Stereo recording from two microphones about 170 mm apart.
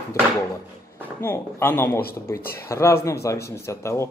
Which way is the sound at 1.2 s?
15° left (ahead or behind).